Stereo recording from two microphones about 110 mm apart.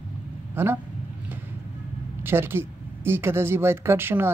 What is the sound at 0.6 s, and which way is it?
Speech, 20° right (ahead or behind).